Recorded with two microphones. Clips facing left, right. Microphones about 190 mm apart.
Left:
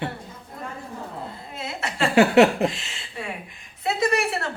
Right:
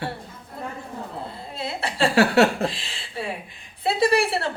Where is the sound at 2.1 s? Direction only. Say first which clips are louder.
Left 3 dB; 20° left (ahead or behind).